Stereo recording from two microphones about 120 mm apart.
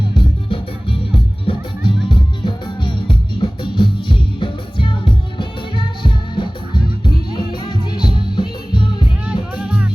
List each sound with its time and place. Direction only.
0.2 s music: 50° left (ahead or behind)
9.6 s music: 10° right (ahead or behind)